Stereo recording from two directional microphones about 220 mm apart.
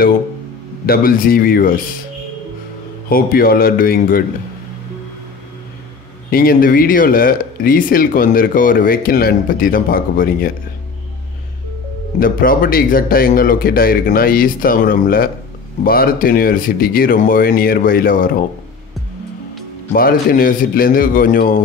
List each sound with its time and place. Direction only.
0.8 s speech: 40° left (ahead or behind)
3.1 s speech: 40° left (ahead or behind)
6.3 s speech: 40° left (ahead or behind)
12.2 s speech: 40° left (ahead or behind)
19.9 s speech: 40° left (ahead or behind)